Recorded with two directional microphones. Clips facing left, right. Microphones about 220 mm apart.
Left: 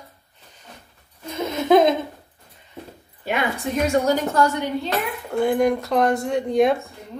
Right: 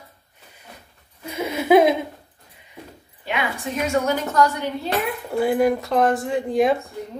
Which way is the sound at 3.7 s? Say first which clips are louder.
Left 2 dB; 35° left (ahead or behind).